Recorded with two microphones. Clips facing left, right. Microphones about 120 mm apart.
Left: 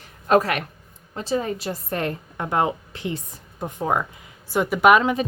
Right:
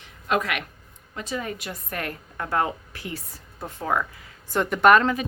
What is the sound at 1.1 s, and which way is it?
Speech, 30° left (ahead or behind).